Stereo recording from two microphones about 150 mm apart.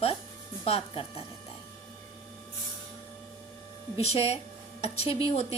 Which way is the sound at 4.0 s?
45° left (ahead or behind).